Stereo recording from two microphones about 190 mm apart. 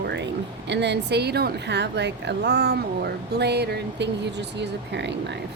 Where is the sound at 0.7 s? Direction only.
65° right (ahead or behind).